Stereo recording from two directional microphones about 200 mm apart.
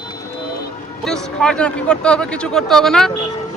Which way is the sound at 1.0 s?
5° left (ahead or behind).